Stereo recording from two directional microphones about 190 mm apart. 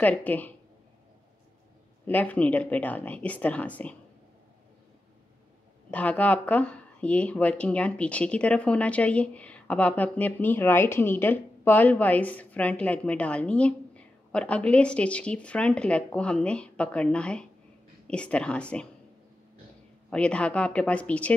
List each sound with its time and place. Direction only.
0.0 s speech: 10° left (ahead or behind)
2.0 s speech: 10° left (ahead or behind)
5.9 s a woman's voice: 10° left (ahead or behind)
20.1 s a woman's voice: 5° left (ahead or behind)